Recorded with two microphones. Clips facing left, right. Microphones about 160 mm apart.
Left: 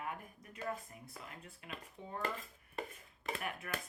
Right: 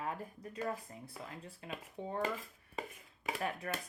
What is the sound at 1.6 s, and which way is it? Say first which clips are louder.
Speech: right 7 dB; 30° right (ahead or behind).